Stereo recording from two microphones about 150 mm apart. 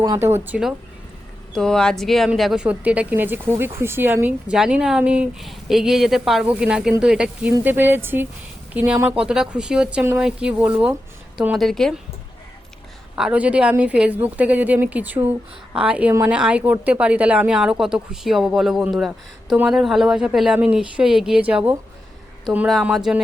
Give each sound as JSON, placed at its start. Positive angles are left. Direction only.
{"t": 0.0, "sound": "speech", "side_deg": -20}
{"t": 1.5, "sound": "speech", "side_deg": 5}
{"t": 13.1, "sound": "speech", "side_deg": -5}